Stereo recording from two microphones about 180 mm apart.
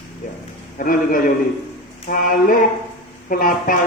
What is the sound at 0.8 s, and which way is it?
Speech, 50° left (ahead or behind).